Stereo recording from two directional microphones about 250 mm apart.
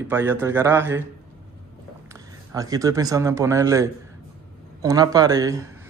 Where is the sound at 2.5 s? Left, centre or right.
Centre.